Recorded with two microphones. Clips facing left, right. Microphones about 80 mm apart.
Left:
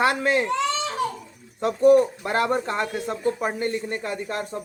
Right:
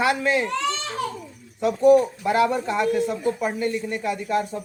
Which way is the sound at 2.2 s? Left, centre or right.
Left.